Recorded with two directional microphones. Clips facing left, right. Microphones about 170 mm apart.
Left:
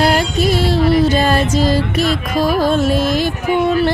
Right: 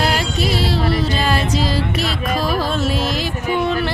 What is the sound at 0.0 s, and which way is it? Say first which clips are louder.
Music: left 5 dB; 50° left (ahead or behind).